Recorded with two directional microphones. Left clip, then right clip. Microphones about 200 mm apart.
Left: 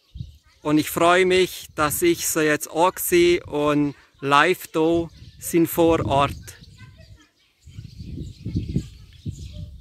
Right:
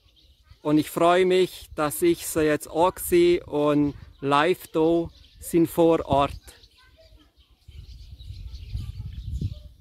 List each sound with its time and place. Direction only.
0.6 s speech: 10° right (ahead or behind)